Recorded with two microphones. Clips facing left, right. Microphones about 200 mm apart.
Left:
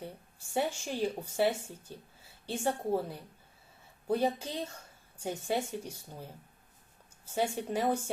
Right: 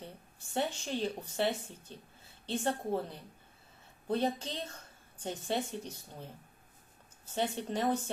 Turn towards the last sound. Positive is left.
turn(degrees=10)  # may be behind; listen again after turning